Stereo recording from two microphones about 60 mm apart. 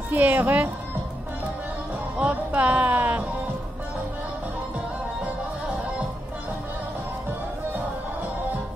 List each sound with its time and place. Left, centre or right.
0.1 s speech: right
2.1 s music: right